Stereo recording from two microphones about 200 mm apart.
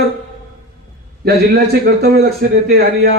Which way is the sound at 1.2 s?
55° right (ahead or behind).